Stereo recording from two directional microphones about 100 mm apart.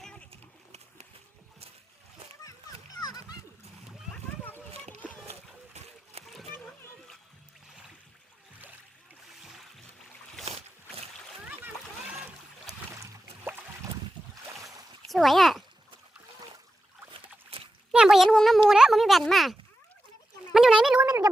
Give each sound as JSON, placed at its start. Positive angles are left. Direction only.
{"t": 0.0, "sound": "splash", "side_deg": 10}
{"t": 0.3, "sound": "a sound", "side_deg": -90}
{"t": 3.0, "sound": "splash", "side_deg": 40}
{"t": 4.1, "sound": "splash", "side_deg": 20}
{"t": 5.0, "sound": "a sound", "side_deg": 15}
{"t": 6.1, "sound": "splash", "side_deg": -90}
{"t": 9.4, "sound": "boat", "side_deg": 0}
{"t": 11.4, "sound": "splash", "side_deg": -15}
{"t": 12.9, "sound": "boat", "side_deg": -30}
{"t": 15.1, "sound": "a child's voice", "side_deg": 0}
{"t": 17.2, "sound": "a sound", "side_deg": -65}
{"t": 17.9, "sound": "a child's voice", "side_deg": -5}
{"t": 20.5, "sound": "a sound", "side_deg": -5}